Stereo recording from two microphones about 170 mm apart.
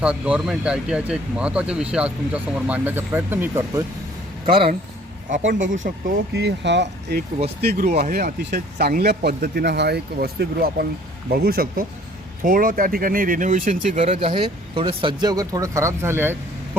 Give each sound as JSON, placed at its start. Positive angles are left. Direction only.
{"t": 0.0, "sound": "speech", "side_deg": -5}
{"t": 4.4, "sound": "speech", "side_deg": -30}
{"t": 5.3, "sound": "speech", "side_deg": -50}
{"t": 6.3, "sound": "speech", "side_deg": -85}
{"t": 7.6, "sound": "speech", "side_deg": -65}